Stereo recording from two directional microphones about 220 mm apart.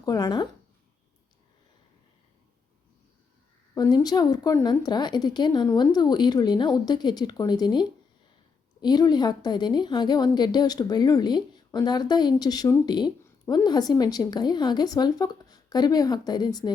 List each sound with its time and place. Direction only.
0.0 s speech: 15° left (ahead or behind)
3.8 s a woman's voice: 15° left (ahead or behind)